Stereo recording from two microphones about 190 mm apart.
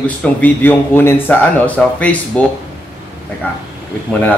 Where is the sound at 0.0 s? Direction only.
10° left (ahead or behind).